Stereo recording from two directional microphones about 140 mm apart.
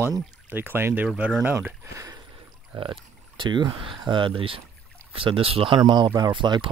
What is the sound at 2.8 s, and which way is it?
Speech, 35° right (ahead or behind).